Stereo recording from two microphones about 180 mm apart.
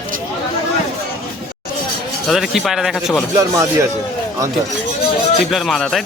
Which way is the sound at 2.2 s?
Centre (ahead or behind).